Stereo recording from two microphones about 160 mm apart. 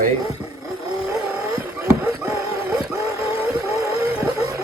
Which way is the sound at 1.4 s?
20° right (ahead or behind).